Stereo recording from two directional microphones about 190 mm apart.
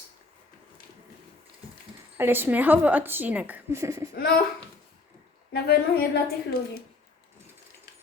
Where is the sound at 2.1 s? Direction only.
10° right (ahead or behind).